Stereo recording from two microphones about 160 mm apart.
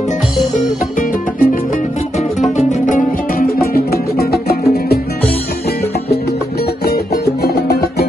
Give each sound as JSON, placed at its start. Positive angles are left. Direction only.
{"t": 0.6, "sound": "music", "side_deg": 55}
{"t": 3.7, "sound": "music", "side_deg": 75}
{"t": 6.8, "sound": "music", "side_deg": 85}